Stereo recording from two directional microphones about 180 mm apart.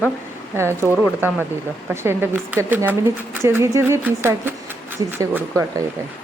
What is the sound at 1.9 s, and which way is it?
Speech, 10° right (ahead or behind).